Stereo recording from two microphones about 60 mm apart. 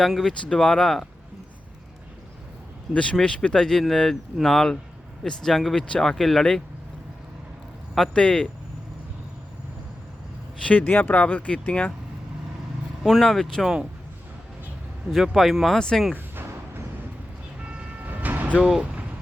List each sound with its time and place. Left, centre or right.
0.0 s speech: centre
0.4 s speech: centre
2.9 s speech: centre
8.1 s speech: centre
10.6 s speech: left
10.8 s speech: left
11.1 s speech: left
13.0 s speech: centre
15.1 s speech: centre
16.1 s music: right
17.6 s vehicle: right